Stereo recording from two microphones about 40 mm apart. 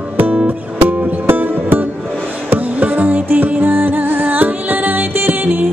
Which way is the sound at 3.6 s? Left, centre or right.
Right.